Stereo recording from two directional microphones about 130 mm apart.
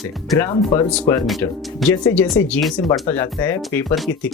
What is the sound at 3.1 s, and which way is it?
Speech, 20° left (ahead or behind).